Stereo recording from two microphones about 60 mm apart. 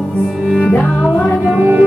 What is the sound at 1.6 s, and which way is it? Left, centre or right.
Music, right.